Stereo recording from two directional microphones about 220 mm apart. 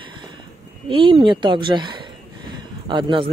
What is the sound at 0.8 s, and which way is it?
A man's voice, 25° right (ahead or behind).